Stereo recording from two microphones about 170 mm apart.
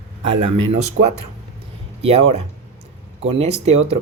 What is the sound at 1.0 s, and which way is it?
Speech, 90° right.